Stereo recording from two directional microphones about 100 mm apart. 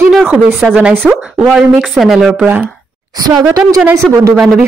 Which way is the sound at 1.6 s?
Centre (ahead or behind).